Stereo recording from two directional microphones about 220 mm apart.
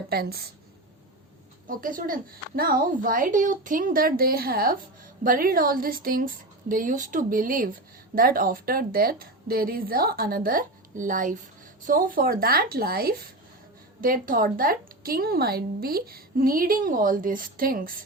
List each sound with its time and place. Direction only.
0.1 s a woman's voice: 45° right (ahead or behind)
1.6 s a woman's voice: 40° right (ahead or behind)